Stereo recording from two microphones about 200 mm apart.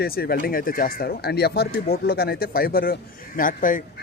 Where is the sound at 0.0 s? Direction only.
50° left (ahead or behind).